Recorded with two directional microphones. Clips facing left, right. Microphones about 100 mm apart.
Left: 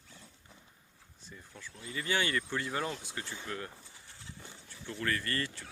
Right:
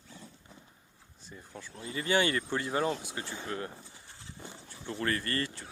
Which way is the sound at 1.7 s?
30° right (ahead or behind).